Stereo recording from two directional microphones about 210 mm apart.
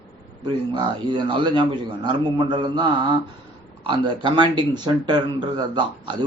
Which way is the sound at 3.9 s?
20° right (ahead or behind).